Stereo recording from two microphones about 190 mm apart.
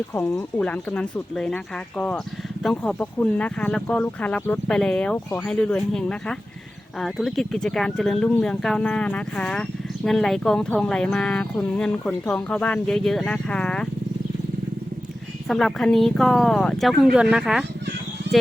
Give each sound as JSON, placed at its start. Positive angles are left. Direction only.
{"t": 0.1, "sound": "speech", "side_deg": 15}
{"t": 15.4, "sound": "speech", "side_deg": 0}
{"t": 18.2, "sound": "a sound", "side_deg": -65}